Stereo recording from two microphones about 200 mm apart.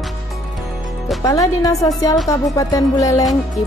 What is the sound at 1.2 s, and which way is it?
Speech, 15° left (ahead or behind).